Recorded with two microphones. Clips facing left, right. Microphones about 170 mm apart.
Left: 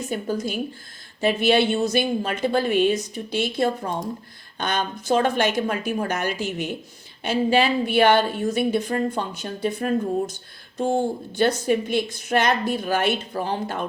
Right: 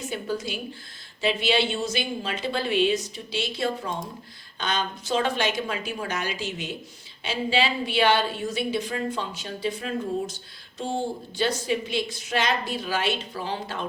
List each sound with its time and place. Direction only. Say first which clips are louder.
0.1 s a woman's voice: left 4 dB; 45° left (ahead or behind)